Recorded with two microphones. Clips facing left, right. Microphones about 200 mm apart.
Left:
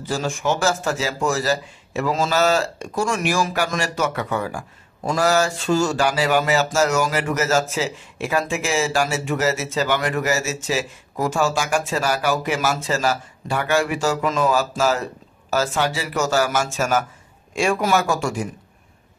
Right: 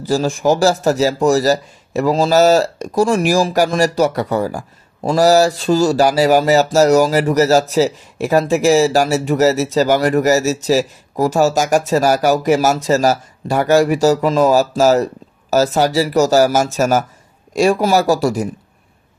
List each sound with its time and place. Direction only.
0.0 s a man's voice: 35° right (ahead or behind)